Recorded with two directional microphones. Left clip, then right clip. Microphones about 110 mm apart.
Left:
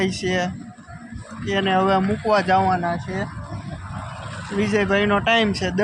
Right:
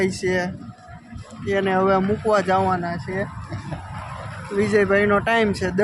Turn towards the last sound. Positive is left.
turn(degrees=-25)  # may be behind; listen again after turning